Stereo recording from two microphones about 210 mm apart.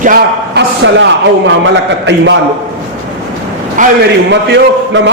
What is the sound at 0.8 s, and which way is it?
A man's voice, 60° right (ahead or behind).